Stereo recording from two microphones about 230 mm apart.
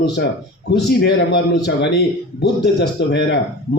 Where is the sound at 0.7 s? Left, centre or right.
Left.